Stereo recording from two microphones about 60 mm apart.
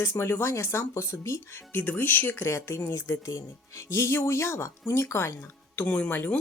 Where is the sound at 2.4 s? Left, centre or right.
Left.